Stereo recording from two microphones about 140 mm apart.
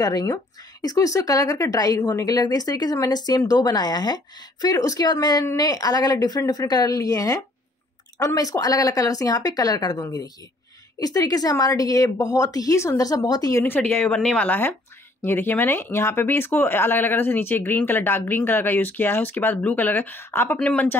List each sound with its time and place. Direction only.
0.0 s speech: 25° left (ahead or behind); by 20.9 s 10° left (ahead or behind)